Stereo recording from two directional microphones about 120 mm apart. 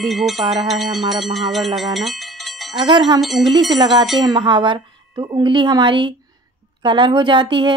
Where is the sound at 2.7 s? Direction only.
40° right (ahead or behind).